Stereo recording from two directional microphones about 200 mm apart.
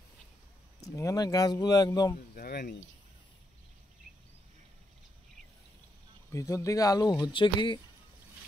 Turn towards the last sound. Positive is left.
turn(degrees=25)  # may be behind; listen again after turning